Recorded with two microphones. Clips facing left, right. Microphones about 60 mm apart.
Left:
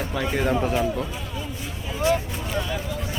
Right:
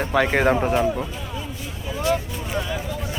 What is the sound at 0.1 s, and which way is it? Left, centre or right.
Speech, right.